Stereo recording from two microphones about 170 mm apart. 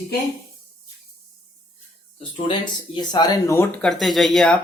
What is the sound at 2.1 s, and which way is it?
Speech, 30° left (ahead or behind).